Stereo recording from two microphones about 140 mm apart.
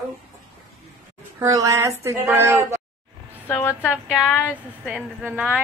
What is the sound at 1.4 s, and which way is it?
A woman's voice, 25° right (ahead or behind).